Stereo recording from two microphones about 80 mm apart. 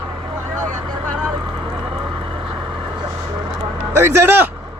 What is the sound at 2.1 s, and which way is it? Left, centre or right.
Vehicle, right.